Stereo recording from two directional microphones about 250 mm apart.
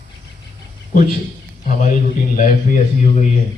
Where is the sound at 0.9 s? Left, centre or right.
Left.